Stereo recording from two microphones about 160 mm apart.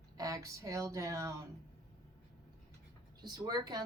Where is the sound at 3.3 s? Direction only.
25° right (ahead or behind).